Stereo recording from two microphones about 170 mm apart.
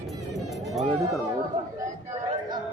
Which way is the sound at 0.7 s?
Centre (ahead or behind).